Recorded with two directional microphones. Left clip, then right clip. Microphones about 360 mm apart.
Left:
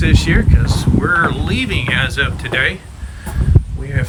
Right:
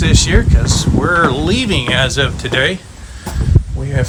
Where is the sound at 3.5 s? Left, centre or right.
Left.